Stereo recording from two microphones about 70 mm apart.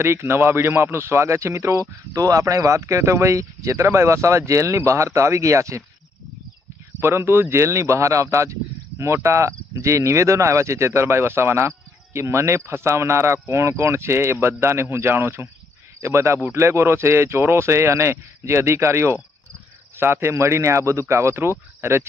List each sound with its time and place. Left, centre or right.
0.3 s a man's voice: right
7.0 s a man's voice: right
20.3 s speech: right